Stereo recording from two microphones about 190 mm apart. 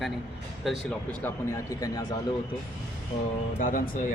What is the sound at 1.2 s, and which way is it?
Speech, 15° left (ahead or behind).